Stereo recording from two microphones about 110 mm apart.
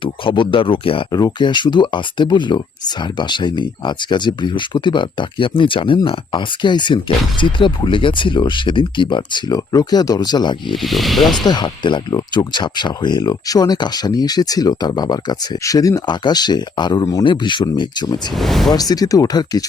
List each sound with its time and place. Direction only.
0.0 s speech: 50° left (ahead or behind)
1.1 s speech: 40° left (ahead or behind)
10.8 s speech: centre (ahead or behind)
11.3 s speech: 40° left (ahead or behind)
18.3 s speech: centre (ahead or behind)
18.7 s speech: 35° left (ahead or behind)